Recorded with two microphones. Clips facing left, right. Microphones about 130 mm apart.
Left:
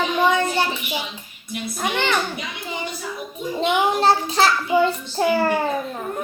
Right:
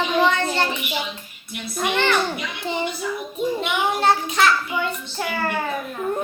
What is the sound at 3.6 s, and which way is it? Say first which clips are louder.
A child's voice: left 8 dB; 30° left (ahead or behind).